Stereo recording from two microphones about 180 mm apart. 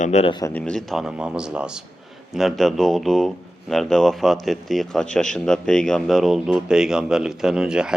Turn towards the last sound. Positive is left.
turn(degrees=-5)  # may be behind; listen again after turning